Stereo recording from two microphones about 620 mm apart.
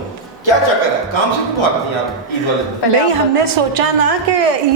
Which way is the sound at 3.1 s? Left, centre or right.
Right.